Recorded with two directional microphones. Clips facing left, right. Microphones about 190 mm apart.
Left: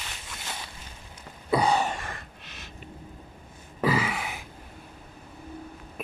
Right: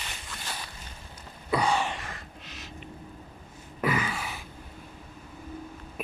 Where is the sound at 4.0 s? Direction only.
85° left.